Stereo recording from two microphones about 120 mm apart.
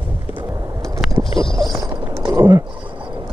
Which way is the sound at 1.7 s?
35° right (ahead or behind).